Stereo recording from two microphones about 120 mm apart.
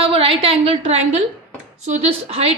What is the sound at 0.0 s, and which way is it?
A woman's voice, 50° right (ahead or behind).